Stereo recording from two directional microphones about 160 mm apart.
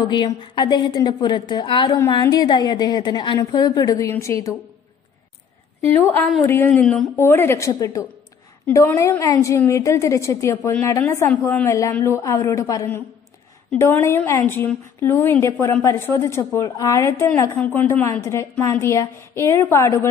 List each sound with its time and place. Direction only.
0.0 s a woman's voice: 30° left (ahead or behind)
6.4 s a woman's voice: 15° left (ahead or behind)